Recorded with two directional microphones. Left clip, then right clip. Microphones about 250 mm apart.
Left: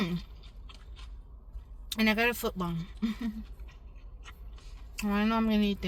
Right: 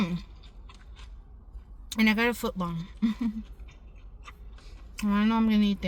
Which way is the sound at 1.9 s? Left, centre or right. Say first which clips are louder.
Right 2 dB; centre.